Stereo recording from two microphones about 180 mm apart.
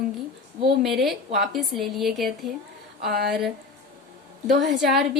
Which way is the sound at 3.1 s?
65° right (ahead or behind).